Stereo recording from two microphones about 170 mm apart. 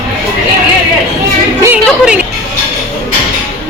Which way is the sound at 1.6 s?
10° right (ahead or behind).